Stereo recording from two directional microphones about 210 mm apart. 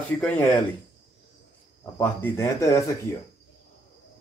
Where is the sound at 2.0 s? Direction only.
10° left (ahead or behind).